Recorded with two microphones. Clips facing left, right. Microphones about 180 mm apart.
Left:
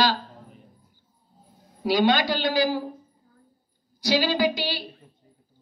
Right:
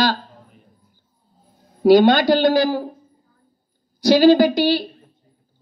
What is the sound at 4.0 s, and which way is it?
Speech, 50° right (ahead or behind).